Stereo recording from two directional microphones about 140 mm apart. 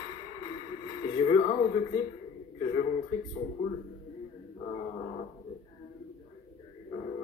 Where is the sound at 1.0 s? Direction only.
35° left (ahead or behind).